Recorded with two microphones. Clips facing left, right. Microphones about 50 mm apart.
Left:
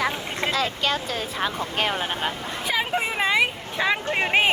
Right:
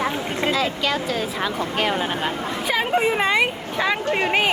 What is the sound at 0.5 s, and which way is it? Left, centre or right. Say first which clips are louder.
Speech: even; left.